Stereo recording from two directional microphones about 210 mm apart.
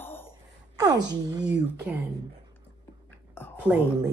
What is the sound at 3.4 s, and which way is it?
Whispering, 10° left (ahead or behind).